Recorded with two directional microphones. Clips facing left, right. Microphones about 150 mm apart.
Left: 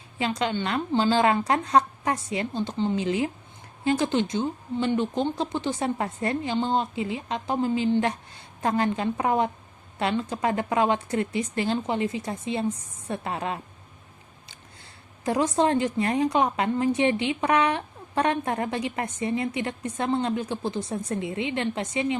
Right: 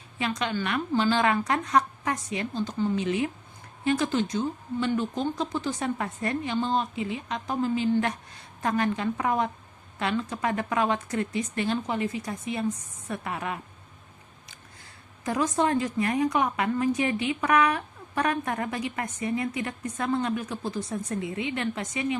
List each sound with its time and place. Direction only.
0.2 s a woman's voice: 30° left (ahead or behind)
15.2 s a woman's voice: 30° left (ahead or behind)